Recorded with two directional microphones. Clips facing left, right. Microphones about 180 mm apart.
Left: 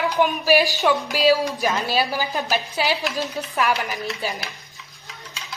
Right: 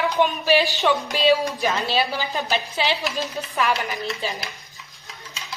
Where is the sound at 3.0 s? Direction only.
Centre (ahead or behind).